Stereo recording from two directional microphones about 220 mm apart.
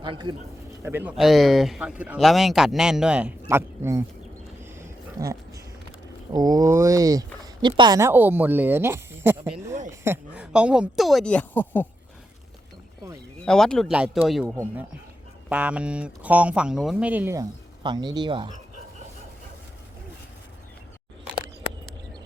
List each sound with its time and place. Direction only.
0.0 s speech: 20° right (ahead or behind)
0.8 s speech: 10° right (ahead or behind)
4.6 s a sound: 10° right (ahead or behind)
6.3 s speech: 15° right (ahead or behind); by 11.9 s 10° left (ahead or behind)
13.4 s speech: 5° left (ahead or behind)
15.4 s speech: 5° right (ahead or behind)
17.8 s speech: 20° right (ahead or behind)